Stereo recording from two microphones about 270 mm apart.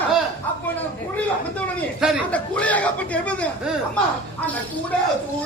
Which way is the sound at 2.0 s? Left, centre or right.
Centre.